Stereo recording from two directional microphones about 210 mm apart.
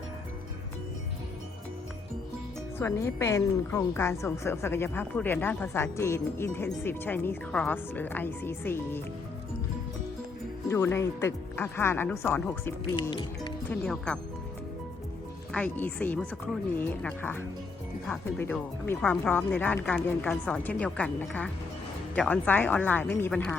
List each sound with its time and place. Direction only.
2.7 s a woman's voice: 15° left (ahead or behind)
10.7 s a woman's voice: 10° left (ahead or behind)
13.0 s speech: 25° left (ahead or behind)
13.7 s speech: 5° left (ahead or behind)
15.5 s a woman's voice: 5° left (ahead or behind)